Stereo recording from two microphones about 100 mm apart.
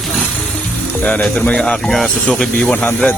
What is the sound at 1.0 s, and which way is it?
Speech, 15° left (ahead or behind).